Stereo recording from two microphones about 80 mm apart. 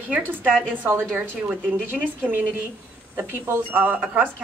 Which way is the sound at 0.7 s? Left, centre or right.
Right.